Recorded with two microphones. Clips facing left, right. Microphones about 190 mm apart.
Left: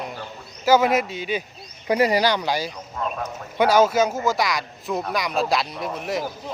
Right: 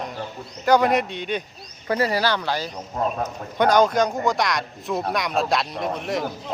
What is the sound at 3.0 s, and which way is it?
Speech, 40° right (ahead or behind).